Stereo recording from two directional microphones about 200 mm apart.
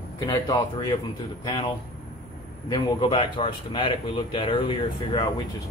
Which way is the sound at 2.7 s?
25° left (ahead or behind).